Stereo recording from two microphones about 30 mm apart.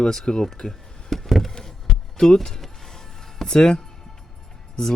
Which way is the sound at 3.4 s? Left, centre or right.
Left.